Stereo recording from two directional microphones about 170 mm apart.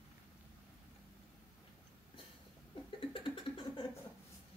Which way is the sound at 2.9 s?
30° left (ahead or behind).